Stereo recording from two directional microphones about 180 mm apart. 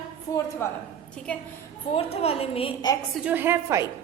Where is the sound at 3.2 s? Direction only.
10° right (ahead or behind).